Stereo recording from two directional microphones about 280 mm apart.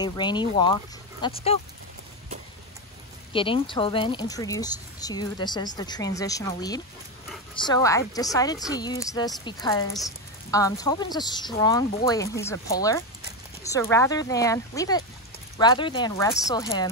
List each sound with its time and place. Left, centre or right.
0.0 s speech: centre
3.3 s speech: centre